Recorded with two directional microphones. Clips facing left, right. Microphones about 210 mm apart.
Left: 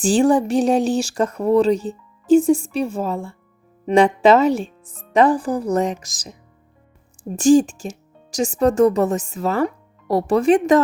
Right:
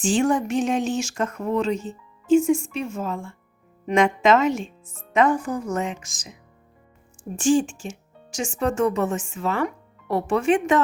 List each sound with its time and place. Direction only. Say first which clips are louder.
0.0 s speech: left 5 dB; 35° left (ahead or behind)
7.3 s speech: left 6 dB; 40° left (ahead or behind)